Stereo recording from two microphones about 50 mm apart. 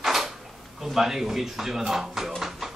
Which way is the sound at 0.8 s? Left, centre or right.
Centre.